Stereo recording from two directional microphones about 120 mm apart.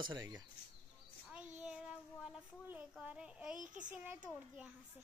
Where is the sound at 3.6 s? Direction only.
90° right.